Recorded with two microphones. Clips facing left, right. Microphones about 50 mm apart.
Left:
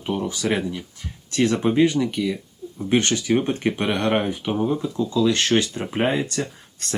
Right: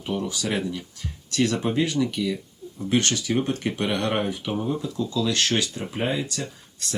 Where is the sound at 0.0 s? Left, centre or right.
Centre.